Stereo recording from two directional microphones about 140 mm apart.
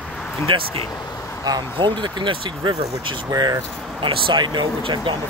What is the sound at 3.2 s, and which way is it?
Speech, 25° right (ahead or behind).